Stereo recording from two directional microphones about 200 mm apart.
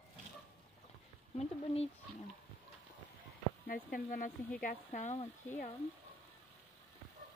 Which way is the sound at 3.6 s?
45° left (ahead or behind).